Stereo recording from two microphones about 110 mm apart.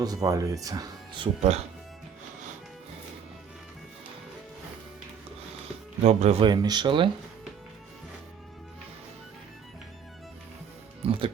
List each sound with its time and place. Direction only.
0.0 s speech: 35° right (ahead or behind)
1.4 s speech: 70° right (ahead or behind)
6.1 s speech: 85° right
6.4 s speech: 40° right (ahead or behind)
11.0 s music: 55° right (ahead or behind)